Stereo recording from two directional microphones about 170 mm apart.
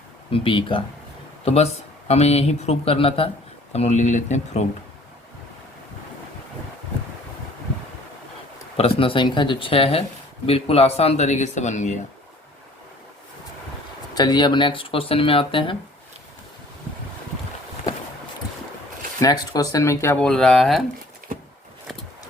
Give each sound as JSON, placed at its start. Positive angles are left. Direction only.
{"t": 0.3, "sound": "speech", "side_deg": 30}
{"t": 8.8, "sound": "speech", "side_deg": 30}
{"t": 14.2, "sound": "speech", "side_deg": 25}
{"t": 19.2, "sound": "speech", "side_deg": 20}